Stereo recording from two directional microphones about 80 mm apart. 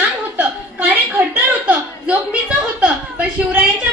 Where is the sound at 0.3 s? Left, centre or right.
Right.